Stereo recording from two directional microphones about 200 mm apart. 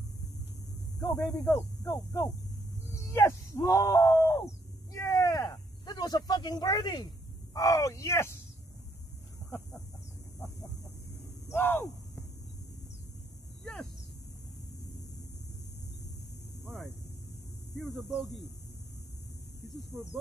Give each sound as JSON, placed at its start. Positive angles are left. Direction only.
{"t": 0.9, "sound": "speech", "side_deg": 15}
{"t": 2.9, "sound": "wail", "side_deg": 15}
{"t": 4.9, "sound": "a sound", "side_deg": 15}
{"t": 7.5, "sound": "speech", "side_deg": 15}
{"t": 11.4, "sound": "speech", "side_deg": 10}
{"t": 17.7, "sound": "speech", "side_deg": 0}